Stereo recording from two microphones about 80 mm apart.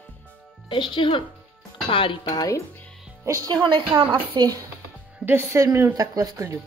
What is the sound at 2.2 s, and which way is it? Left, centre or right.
Speech, left.